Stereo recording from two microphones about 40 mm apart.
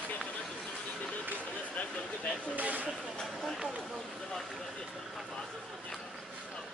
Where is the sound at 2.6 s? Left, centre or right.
Right.